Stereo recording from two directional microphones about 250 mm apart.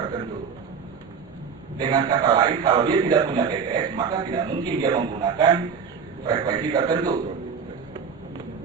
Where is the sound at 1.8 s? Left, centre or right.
Centre.